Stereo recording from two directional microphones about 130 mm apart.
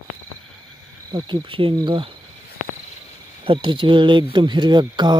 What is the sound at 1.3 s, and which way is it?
Speech, 40° right (ahead or behind).